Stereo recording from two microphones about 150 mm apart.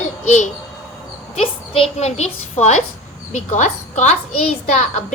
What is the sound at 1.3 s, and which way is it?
A woman's voice, 45° left (ahead or behind).